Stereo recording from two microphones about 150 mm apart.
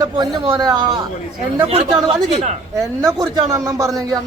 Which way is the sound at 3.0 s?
25° right (ahead or behind).